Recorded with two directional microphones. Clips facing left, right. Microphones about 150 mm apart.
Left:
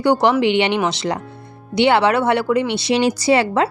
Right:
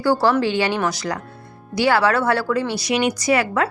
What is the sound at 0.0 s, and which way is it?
A woman's voice, 20° left (ahead or behind).